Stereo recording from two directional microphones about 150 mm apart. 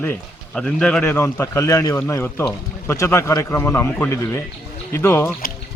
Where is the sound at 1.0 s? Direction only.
15° left (ahead or behind).